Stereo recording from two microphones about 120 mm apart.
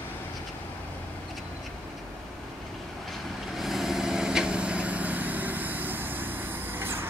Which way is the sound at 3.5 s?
Centre (ahead or behind).